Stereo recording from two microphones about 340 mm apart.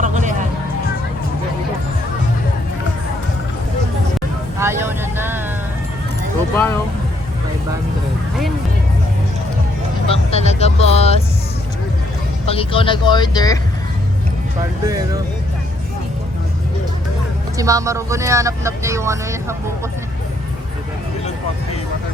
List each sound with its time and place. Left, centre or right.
0.0 s music: right
4.6 s vehicle: centre
10.1 s vehicle: centre
12.5 s vehicle: centre
17.6 s speech: centre